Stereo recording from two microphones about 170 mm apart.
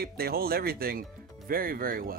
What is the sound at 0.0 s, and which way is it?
Speech, 65° right (ahead or behind).